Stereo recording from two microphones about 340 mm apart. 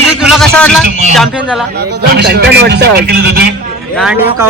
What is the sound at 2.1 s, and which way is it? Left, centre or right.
A man's voice, right.